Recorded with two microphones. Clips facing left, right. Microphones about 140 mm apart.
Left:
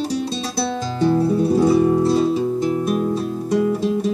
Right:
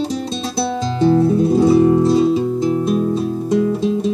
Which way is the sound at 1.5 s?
20° right (ahead or behind).